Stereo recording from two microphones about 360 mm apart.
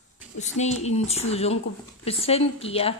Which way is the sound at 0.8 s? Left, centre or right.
Centre.